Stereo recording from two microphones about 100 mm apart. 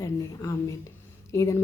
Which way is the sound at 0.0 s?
30° left (ahead or behind).